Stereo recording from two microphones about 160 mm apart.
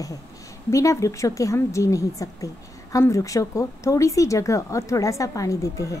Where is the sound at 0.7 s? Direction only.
20° left (ahead or behind).